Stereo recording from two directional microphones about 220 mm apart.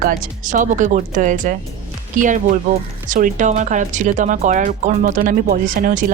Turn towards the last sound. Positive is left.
turn(degrees=-40)  # may be behind; listen again after turning